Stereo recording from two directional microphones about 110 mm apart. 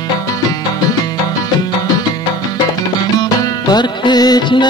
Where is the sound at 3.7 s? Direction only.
40° left (ahead or behind).